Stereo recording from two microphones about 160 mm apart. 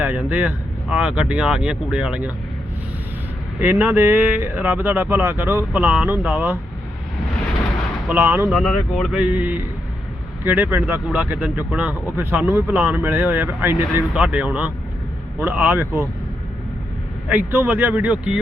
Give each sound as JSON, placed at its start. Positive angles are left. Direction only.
{"t": 0.0, "sound": "speech", "side_deg": -10}
{"t": 3.6, "sound": "speech", "side_deg": -10}
{"t": 8.0, "sound": "speech", "side_deg": -15}
{"t": 17.2, "sound": "speech", "side_deg": -15}